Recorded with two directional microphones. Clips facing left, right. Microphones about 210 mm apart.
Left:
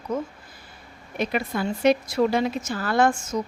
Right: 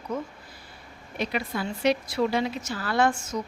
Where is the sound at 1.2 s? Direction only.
50° left (ahead or behind).